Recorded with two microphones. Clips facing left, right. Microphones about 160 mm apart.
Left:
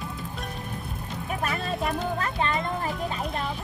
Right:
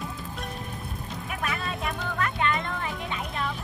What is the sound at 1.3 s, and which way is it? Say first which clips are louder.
Music: left 3 dB; 35° left (ahead or behind).